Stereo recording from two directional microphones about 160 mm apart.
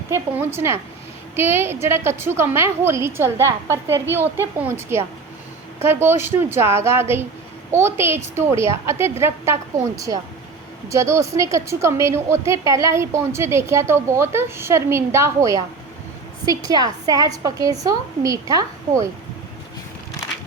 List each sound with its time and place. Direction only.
0.1 s a woman's voice: 15° right (ahead or behind)
16.6 s a woman's voice: 25° right (ahead or behind)